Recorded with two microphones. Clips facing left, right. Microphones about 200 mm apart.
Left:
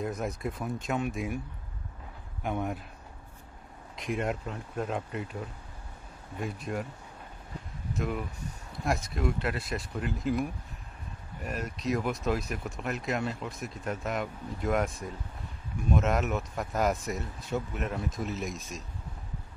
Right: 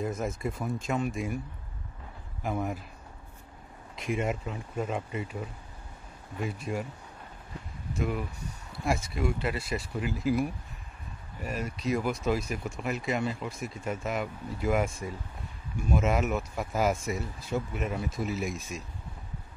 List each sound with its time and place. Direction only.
0.0 s speech: centre (ahead or behind)
2.4 s speech: centre (ahead or behind)
3.9 s speech: centre (ahead or behind)
7.9 s speech: centre (ahead or behind)
18.5 s speech: 55° right (ahead or behind)